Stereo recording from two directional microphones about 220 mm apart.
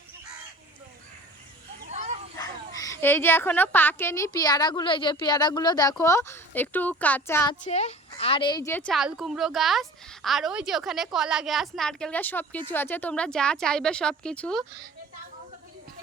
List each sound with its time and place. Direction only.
1.9 s a sound: 30° right (ahead or behind)
2.4 s a woman's voice: 15° left (ahead or behind)
7.6 s a woman's voice: 30° left (ahead or behind); by 14.6 s 5° left (ahead or behind)